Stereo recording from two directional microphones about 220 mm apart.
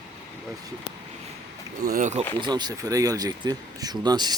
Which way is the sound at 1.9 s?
35° right (ahead or behind).